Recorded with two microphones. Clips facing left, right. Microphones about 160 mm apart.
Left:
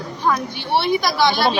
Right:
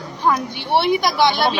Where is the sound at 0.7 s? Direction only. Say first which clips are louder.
Right 2 dB; 15° right (ahead or behind).